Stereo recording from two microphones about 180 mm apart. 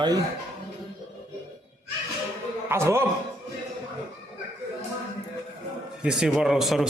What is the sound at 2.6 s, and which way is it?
Speech, 15° right (ahead or behind).